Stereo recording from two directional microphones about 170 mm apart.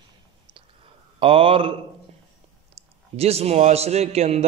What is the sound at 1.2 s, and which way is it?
Speech, 30° right (ahead or behind).